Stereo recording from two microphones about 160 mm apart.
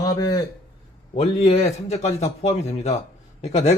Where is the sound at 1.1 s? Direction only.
40° left (ahead or behind).